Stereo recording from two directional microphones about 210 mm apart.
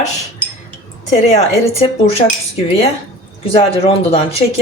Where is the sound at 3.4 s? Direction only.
25° left (ahead or behind).